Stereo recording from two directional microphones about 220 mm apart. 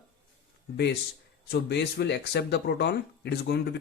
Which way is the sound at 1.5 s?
50° left (ahead or behind).